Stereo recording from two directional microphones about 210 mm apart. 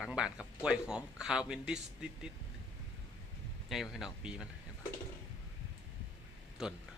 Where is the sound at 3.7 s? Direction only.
Centre (ahead or behind).